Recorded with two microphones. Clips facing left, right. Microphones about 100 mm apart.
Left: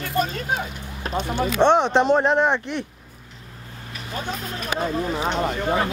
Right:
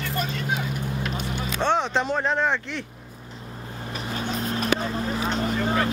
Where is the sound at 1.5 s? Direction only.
20° left (ahead or behind).